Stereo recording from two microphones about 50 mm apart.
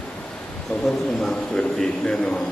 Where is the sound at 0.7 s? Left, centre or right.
Left.